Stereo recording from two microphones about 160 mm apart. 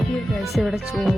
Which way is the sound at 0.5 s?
Centre (ahead or behind).